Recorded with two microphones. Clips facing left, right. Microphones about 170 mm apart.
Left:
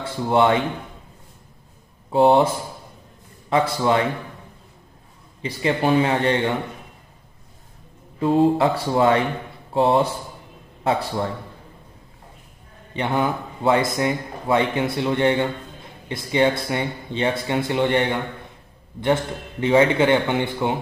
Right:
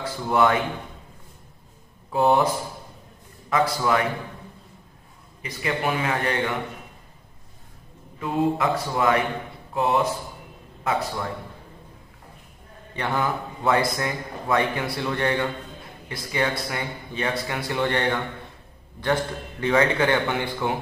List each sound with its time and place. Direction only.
0.0 s speech: 25° left (ahead or behind)
2.1 s a man's voice: 25° left (ahead or behind)
5.4 s a man's voice: 30° left (ahead or behind)
8.2 s a man's voice: 30° left (ahead or behind)
12.9 s a man's voice: 20° left (ahead or behind)
19.6 s a man's voice: 20° left (ahead or behind)